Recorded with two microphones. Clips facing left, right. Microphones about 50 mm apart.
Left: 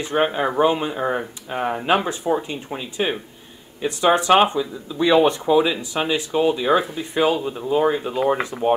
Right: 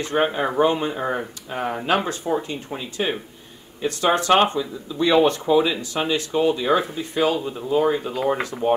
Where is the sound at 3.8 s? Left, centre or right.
Centre.